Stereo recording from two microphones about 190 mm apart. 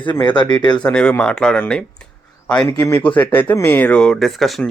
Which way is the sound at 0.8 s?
5° left (ahead or behind).